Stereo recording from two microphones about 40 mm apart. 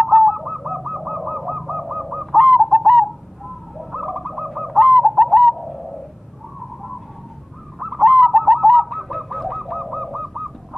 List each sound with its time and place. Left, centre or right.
0.0 s bird: centre
7.8 s bird: centre